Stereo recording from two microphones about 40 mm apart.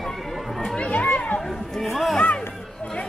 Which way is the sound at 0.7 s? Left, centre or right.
Left.